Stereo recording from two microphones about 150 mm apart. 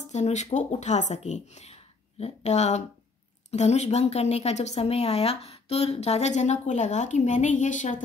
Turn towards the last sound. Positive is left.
turn(degrees=55)  # may be behind; listen again after turning